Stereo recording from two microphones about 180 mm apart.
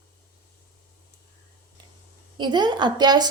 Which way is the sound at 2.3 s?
25° right (ahead or behind).